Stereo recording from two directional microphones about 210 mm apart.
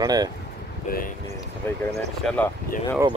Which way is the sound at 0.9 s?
45° left (ahead or behind).